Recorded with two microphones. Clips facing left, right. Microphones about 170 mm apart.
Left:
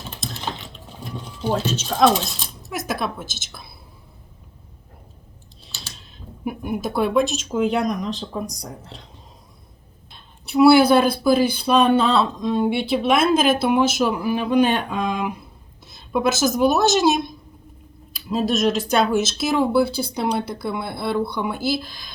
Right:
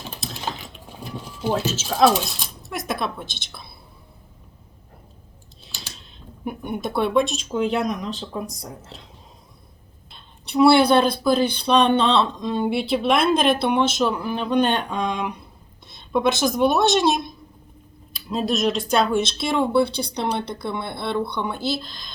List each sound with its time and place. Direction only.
0.2 s a sound: 5° right (ahead or behind)
2.7 s speech: centre (ahead or behind)
6.0 s speech: 5° left (ahead or behind)
10.1 s speech: centre (ahead or behind)